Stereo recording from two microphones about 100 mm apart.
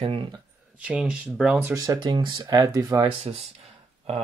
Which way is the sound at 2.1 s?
50° right (ahead or behind).